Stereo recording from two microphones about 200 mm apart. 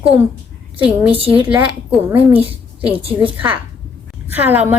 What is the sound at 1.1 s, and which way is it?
Speech, 25° right (ahead or behind).